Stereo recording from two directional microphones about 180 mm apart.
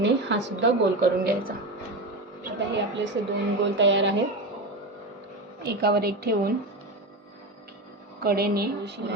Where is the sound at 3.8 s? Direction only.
90° right.